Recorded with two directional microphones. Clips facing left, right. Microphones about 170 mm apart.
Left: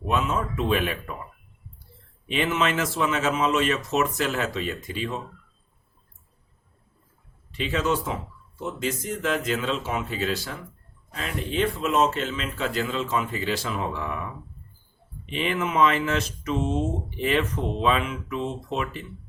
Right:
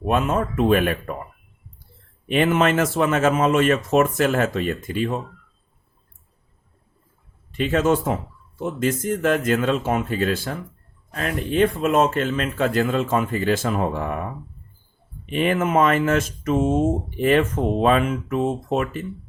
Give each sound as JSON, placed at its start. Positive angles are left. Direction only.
{"t": 0.0, "sound": "speech", "side_deg": -55}
{"t": 2.2, "sound": "speech", "side_deg": -50}
{"t": 7.5, "sound": "speech", "side_deg": -50}
{"t": 15.3, "sound": "speech", "side_deg": -50}